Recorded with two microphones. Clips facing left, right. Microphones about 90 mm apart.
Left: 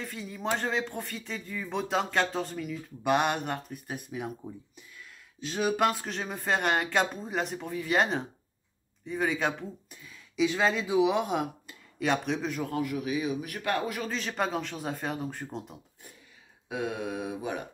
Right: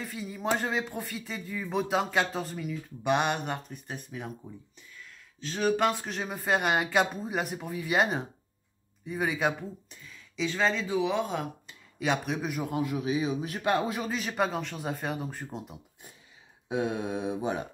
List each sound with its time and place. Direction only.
0.0 s speech: 5° right (ahead or behind)
5.4 s speech: 10° left (ahead or behind)
9.8 s speech: 10° left (ahead or behind)
12.0 s speech: 5° right (ahead or behind); by 14.0 s 20° right (ahead or behind)
14.0 s speech: 5° right (ahead or behind)
16.6 s speech: 25° right (ahead or behind)